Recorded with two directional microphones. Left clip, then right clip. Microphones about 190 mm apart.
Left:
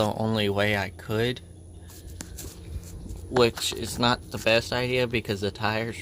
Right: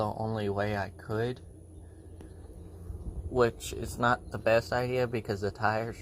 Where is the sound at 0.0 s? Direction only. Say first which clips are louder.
Left 7 dB; 30° left (ahead or behind).